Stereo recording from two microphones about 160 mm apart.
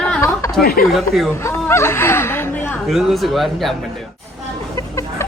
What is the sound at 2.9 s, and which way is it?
Speech, centre (ahead or behind).